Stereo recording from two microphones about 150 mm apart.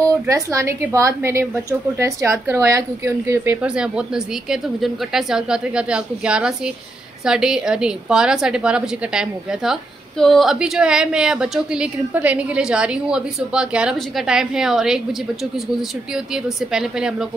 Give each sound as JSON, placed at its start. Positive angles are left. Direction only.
{"t": 0.3, "sound": "a woman's voice", "side_deg": -20}
{"t": 3.6, "sound": "a woman's voice", "side_deg": -5}
{"t": 16.4, "sound": "a woman's voice", "side_deg": -5}